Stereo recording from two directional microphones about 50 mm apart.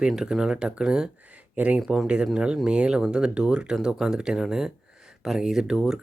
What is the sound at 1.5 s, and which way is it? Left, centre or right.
Speech, right.